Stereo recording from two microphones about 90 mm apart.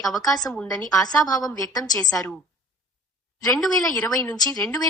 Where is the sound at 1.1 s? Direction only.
45° left (ahead or behind).